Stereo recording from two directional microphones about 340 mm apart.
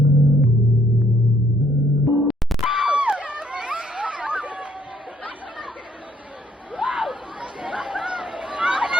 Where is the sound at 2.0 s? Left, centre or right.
Centre.